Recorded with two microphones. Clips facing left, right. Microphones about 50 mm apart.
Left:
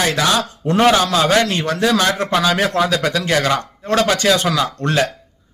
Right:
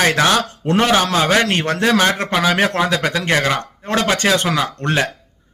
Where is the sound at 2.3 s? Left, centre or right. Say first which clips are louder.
Even; right.